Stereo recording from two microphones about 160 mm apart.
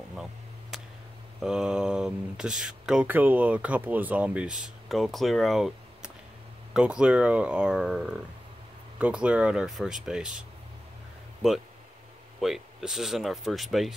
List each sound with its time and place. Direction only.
0.1 s a sound: 5° right (ahead or behind)
1.4 s speech: 5° right (ahead or behind)
12.4 s speech: centre (ahead or behind)